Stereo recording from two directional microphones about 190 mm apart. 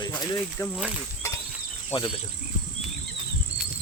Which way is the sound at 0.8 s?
5° right (ahead or behind).